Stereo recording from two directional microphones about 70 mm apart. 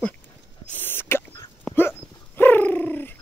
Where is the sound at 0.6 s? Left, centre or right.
Left.